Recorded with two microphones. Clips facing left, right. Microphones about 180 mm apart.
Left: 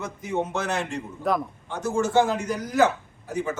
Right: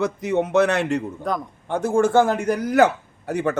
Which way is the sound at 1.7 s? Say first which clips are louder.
Right 7 dB; 55° right (ahead or behind).